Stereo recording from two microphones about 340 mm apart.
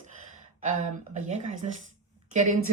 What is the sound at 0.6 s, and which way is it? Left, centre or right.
A woman's voice, right.